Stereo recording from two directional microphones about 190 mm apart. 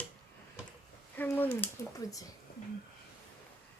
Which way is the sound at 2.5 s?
50° left (ahead or behind).